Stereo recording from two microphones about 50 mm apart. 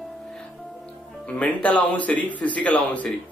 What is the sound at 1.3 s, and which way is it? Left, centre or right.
Speech, left.